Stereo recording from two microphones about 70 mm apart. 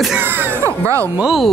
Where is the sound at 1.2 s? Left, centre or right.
Centre.